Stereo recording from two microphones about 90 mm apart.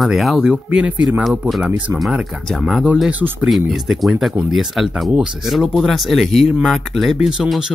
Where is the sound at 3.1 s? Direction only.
15° right (ahead or behind).